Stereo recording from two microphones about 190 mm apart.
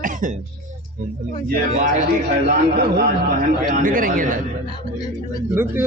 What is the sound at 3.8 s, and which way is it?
Speech, 45° right (ahead or behind).